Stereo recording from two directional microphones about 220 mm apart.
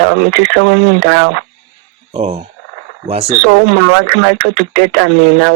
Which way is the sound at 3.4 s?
65° right (ahead or behind).